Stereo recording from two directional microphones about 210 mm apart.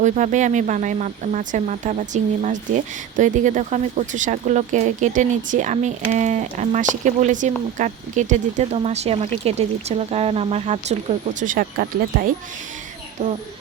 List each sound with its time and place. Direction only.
0.0 s speech: 35° right (ahead or behind)
13.2 s speech: 30° right (ahead or behind)